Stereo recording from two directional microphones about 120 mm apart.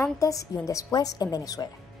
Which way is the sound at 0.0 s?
25° left (ahead or behind).